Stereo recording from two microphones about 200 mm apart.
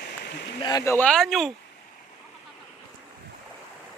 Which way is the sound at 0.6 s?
15° left (ahead or behind).